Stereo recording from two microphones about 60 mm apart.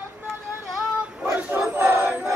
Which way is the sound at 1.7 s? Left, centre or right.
Right.